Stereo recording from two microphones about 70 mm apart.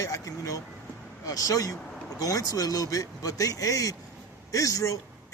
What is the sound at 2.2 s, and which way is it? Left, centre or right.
A man's voice, left.